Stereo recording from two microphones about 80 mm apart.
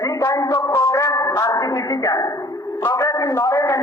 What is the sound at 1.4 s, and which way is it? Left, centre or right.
A man's voice, left.